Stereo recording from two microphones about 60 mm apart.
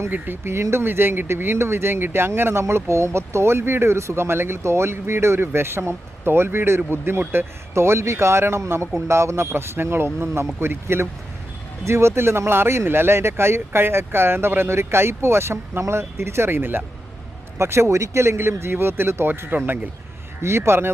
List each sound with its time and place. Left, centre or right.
0.1 s speech: right
7.7 s speech: right
17.6 s speech: right
20.4 s speech: right